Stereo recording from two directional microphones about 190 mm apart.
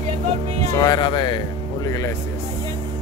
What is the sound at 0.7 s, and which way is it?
Speech, 20° left (ahead or behind).